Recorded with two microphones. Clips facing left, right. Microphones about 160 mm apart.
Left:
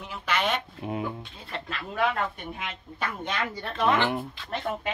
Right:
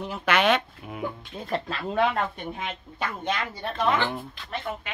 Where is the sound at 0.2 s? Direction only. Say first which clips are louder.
Right 5 dB; 70° right (ahead or behind).